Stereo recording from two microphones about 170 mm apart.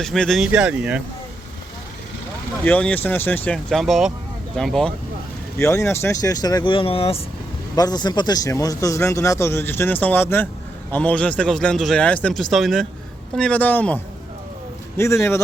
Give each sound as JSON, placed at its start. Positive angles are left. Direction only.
{"t": 0.0, "sound": "speech", "side_deg": 0}
{"t": 2.6, "sound": "speech", "side_deg": 10}
{"t": 5.5, "sound": "speech", "side_deg": 15}
{"t": 7.8, "sound": "speech", "side_deg": 25}